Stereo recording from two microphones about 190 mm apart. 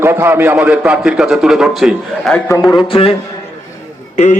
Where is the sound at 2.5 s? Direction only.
15° left (ahead or behind).